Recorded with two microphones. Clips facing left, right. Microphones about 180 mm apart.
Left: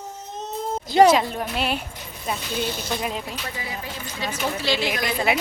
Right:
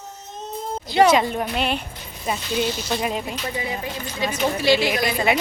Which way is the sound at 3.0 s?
Centre (ahead or behind).